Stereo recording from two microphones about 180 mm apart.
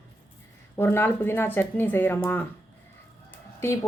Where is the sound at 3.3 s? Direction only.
15° left (ahead or behind).